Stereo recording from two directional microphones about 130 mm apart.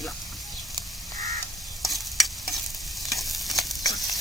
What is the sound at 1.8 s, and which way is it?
Stir, centre (ahead or behind).